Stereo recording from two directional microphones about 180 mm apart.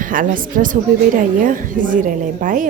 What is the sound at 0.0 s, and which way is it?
A woman's voice, 50° right (ahead or behind).